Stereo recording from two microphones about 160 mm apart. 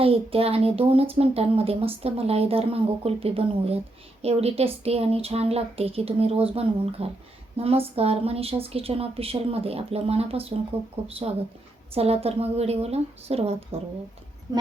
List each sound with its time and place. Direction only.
0.0 s a woman's voice: 35° right (ahead or behind)
11.9 s a woman's voice: 40° right (ahead or behind)